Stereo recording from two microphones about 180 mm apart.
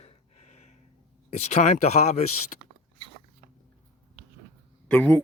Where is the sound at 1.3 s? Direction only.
40° left (ahead or behind).